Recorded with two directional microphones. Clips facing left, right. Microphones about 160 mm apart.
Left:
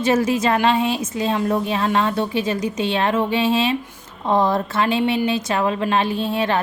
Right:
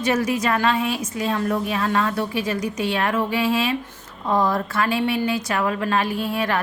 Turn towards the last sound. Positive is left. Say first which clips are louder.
# left 3 dB
turn(degrees=25)  # may be behind; listen again after turning